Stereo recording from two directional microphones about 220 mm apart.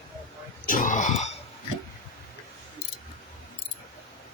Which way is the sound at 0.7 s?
35° left (ahead or behind).